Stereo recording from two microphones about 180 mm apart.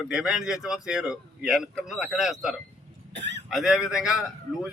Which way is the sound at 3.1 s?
75° right (ahead or behind).